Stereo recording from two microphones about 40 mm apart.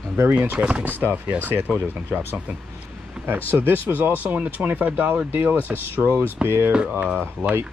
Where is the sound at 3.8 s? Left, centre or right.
Right.